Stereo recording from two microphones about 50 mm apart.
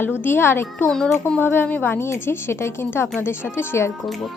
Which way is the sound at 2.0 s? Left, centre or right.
Left.